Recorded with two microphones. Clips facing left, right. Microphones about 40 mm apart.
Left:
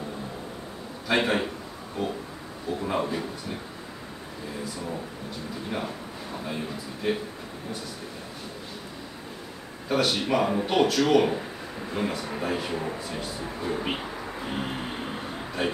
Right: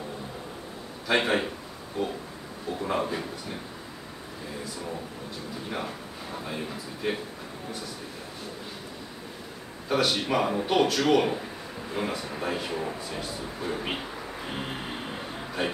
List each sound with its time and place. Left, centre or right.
1.0 s speech: centre
6.4 s speech: centre
9.8 s speech: centre
14.4 s a sound: centre